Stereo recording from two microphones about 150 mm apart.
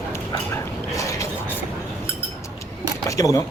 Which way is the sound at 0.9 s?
20° left (ahead or behind).